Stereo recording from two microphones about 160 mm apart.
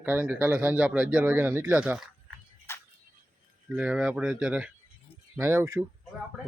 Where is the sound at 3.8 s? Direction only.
5° right (ahead or behind).